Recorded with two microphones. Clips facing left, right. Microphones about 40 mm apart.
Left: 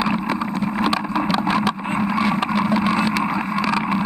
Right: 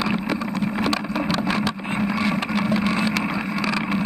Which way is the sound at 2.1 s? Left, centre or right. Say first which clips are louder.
Left 3 dB; centre.